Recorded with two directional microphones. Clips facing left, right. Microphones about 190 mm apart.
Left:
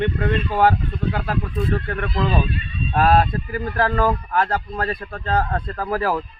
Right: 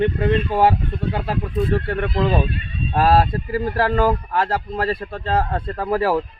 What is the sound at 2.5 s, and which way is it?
Horse, 55° right (ahead or behind).